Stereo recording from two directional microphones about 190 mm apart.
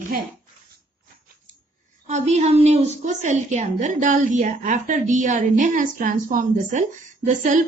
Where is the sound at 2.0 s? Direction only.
35° right (ahead or behind).